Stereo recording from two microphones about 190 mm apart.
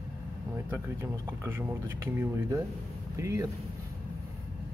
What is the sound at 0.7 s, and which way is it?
Speech, 15° right (ahead or behind).